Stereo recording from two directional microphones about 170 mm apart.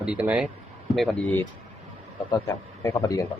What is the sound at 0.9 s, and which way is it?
Speech, centre (ahead or behind).